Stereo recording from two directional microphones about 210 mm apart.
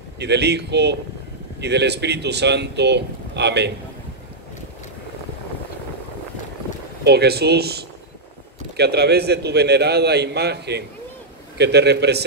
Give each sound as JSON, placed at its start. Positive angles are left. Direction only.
{"t": 0.2, "sound": "speech", "side_deg": -50}
{"t": 7.1, "sound": "speech", "side_deg": -50}